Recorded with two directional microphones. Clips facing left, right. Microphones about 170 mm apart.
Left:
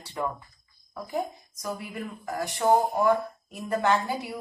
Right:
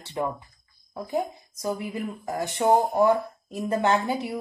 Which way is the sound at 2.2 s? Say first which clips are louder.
Right 1 dB; 25° right (ahead or behind).